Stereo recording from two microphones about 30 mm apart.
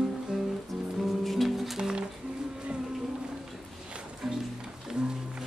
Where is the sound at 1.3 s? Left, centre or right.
Centre.